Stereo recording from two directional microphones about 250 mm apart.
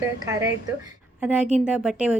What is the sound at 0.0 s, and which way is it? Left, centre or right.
Speech, centre.